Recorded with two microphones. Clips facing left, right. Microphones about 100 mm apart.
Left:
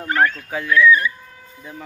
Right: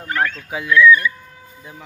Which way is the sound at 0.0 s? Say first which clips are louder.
Left 3 dB; 35° left (ahead or behind).